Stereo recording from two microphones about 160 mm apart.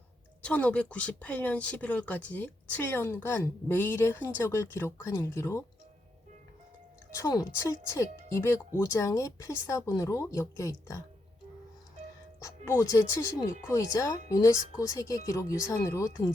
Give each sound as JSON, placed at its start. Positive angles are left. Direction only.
{"t": 0.4, "sound": "speech", "side_deg": 10}
{"t": 7.1, "sound": "speech", "side_deg": 20}
{"t": 12.4, "sound": "speech", "side_deg": 20}